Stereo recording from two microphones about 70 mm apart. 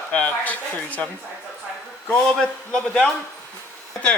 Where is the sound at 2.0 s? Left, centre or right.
Centre.